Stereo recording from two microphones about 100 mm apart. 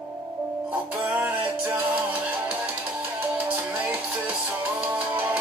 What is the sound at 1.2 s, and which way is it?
Music, 20° right (ahead or behind).